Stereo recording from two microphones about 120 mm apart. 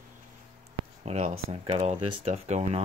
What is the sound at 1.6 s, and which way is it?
Speech, 50° right (ahead or behind).